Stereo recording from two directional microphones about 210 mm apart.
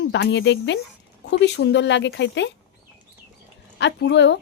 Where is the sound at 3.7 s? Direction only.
55° left (ahead or behind).